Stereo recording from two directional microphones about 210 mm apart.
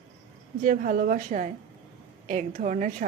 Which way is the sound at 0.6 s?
40° right (ahead or behind).